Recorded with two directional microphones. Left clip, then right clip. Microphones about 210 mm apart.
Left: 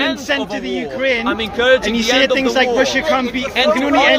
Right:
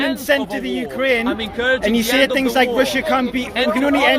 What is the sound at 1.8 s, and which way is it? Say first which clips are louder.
Speech: left 1 dB; 55° right (ahead or behind).